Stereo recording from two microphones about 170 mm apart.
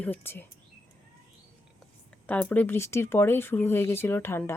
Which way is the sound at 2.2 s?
10° left (ahead or behind).